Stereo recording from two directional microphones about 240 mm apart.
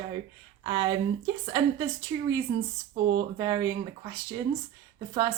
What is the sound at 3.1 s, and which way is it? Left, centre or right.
Speech, centre.